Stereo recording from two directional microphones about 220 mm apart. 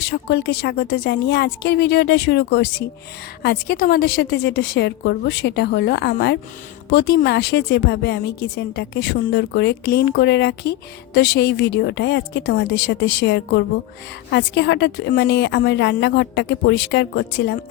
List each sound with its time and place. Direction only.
0.0 s a woman's voice: 50° left (ahead or behind)